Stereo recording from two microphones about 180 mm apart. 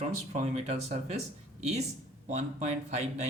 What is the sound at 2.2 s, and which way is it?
Speech, 40° right (ahead or behind).